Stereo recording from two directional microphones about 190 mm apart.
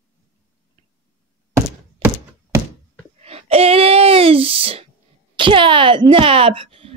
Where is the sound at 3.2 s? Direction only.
30° right (ahead or behind).